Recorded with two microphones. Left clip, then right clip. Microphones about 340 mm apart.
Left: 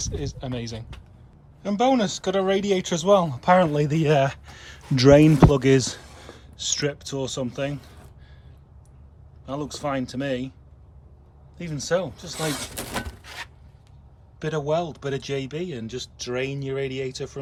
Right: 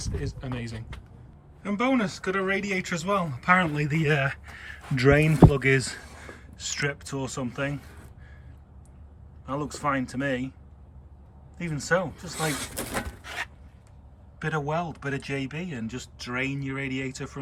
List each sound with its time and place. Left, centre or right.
0.0 s speech: centre
9.5 s speech: centre
11.5 s speech: centre